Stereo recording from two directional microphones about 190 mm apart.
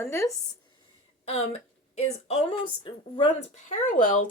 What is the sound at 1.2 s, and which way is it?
Speech, 35° left (ahead or behind).